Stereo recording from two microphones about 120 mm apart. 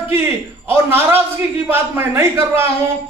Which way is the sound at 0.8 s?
20° right (ahead or behind).